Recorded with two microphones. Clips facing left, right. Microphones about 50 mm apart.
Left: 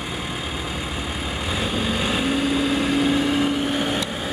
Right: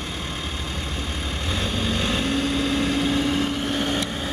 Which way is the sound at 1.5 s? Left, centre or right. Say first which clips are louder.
Left 1 dB; centre.